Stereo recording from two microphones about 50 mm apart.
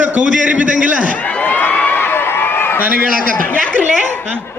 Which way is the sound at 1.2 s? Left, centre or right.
Left.